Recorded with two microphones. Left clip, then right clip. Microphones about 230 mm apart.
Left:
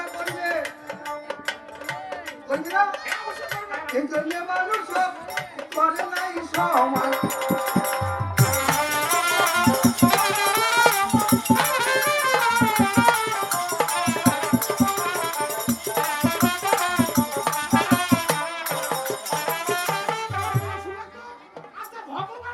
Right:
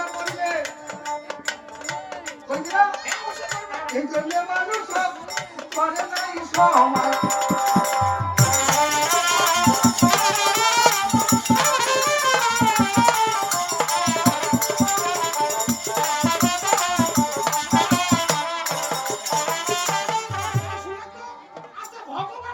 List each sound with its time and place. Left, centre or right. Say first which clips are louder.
0.3 s music: even; centre